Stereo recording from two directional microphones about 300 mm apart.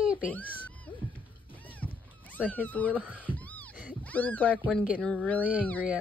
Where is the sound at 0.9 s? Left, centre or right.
Centre.